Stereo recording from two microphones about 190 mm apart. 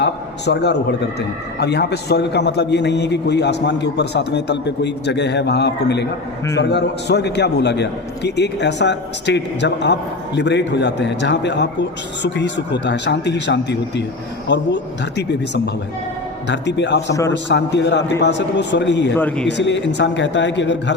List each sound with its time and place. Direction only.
0.0 s a sound: 60° left (ahead or behind)
1.5 s a man's voice: 60° left (ahead or behind)
19.1 s a man's voice: 10° left (ahead or behind)
19.5 s a man's voice: 65° left (ahead or behind)